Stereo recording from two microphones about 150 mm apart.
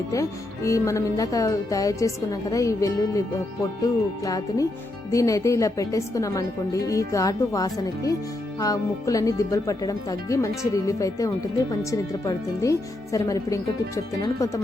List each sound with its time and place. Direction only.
0.1 s speech: 20° left (ahead or behind)